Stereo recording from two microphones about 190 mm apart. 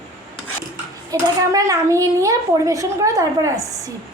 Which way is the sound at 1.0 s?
15° right (ahead or behind).